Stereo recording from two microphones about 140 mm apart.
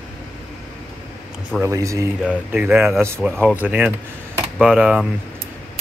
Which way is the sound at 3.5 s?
10° right (ahead or behind).